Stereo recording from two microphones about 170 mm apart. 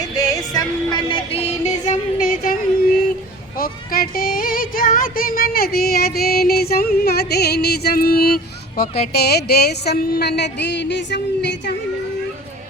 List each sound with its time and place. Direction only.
0.0 s music: 20° left (ahead or behind); by 2.6 s 55° left (ahead or behind)
3.6 s music: 60° left (ahead or behind)
9.1 s a woman's voice: 70° left (ahead or behind); by 11.7 s 90° left